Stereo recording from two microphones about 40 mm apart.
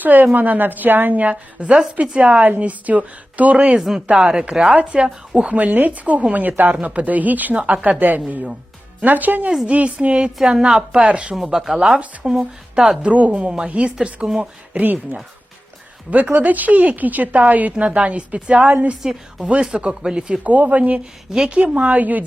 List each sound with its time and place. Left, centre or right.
0.0 s a woman's voice: right
3.8 s a woman's voice: centre; by 5.0 s right
5.0 s a woman's voice: centre
5.5 s a woman's voice: right
7.7 s a woman's voice: right
9.6 s a woman's voice: right
11.5 s speech: centre
12.2 s a woman's voice: right
13.1 s a woman's voice: right
16.0 s speech: right
18.6 s speech: right
19.5 s a woman's voice: right
20.4 s speech: right